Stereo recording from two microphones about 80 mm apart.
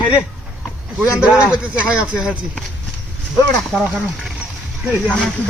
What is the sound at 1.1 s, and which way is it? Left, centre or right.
Speech, centre.